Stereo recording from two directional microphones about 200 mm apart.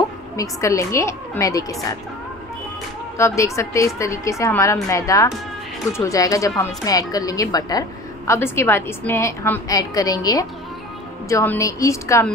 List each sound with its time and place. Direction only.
0.4 s a woman's voice: 15° left (ahead or behind)
3.2 s a woman's voice: 15° left (ahead or behind)